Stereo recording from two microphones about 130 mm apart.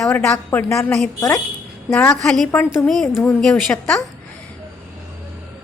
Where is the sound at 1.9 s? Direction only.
10° left (ahead or behind).